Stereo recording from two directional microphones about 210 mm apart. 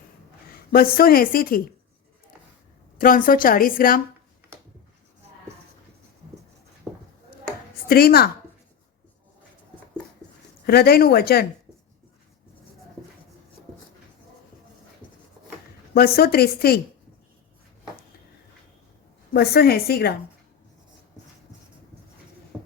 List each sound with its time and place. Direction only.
0.5 s a woman's voice: 45° left (ahead or behind)
3.0 s a woman's voice: 40° left (ahead or behind)
6.9 s a sound: centre (ahead or behind)
7.9 s a woman's voice: 45° left (ahead or behind)
10.7 s a woman's voice: 45° left (ahead or behind)
15.0 s a sound: 5° left (ahead or behind)
16.0 s a woman's voice: 45° left (ahead or behind)
19.3 s a woman's voice: 50° left (ahead or behind)